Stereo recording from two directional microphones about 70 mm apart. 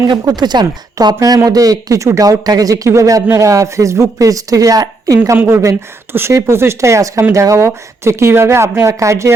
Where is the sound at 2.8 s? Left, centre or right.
Right.